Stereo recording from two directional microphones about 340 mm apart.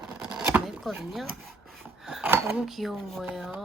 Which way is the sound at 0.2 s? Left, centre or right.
Centre.